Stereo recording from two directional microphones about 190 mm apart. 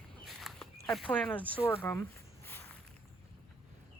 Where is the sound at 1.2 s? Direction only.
10° left (ahead or behind).